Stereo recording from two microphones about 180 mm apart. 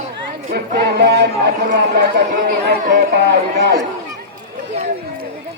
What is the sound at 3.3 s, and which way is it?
Speech, 70° right (ahead or behind).